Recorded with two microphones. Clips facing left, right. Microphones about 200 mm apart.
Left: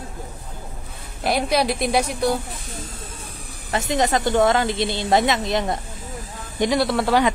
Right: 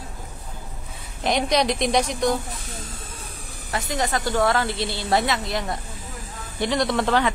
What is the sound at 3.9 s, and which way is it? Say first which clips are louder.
A woman's voice: left 5 dB; 20° left (ahead or behind).